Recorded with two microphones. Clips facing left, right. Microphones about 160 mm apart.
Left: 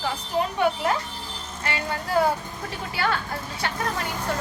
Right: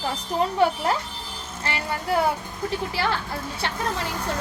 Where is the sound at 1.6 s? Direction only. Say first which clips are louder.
Right 1 dB; 30° right (ahead or behind).